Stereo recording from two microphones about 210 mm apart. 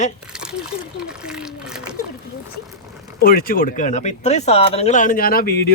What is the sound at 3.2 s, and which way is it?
Speech, 45° left (ahead or behind).